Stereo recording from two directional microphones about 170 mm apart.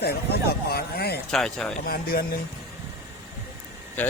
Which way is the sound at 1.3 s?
Centre (ahead or behind).